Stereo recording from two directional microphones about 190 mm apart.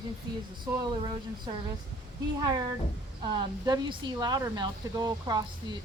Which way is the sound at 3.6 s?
20° right (ahead or behind).